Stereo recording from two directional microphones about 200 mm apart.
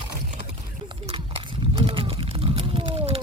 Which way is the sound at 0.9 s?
25° right (ahead or behind).